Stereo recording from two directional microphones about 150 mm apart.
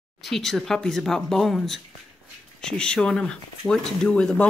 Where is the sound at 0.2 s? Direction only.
Centre (ahead or behind).